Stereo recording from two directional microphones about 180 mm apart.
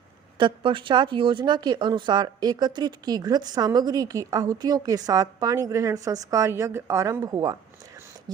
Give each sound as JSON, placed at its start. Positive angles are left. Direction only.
{"t": 0.3, "sound": "speech", "side_deg": -25}